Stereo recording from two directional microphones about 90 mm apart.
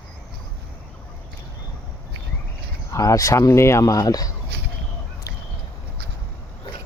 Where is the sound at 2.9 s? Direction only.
35° left (ahead or behind).